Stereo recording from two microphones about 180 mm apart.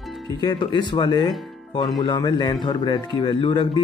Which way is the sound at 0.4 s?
25° left (ahead or behind).